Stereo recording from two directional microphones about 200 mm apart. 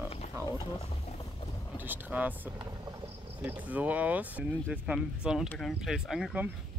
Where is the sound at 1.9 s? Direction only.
10° right (ahead or behind).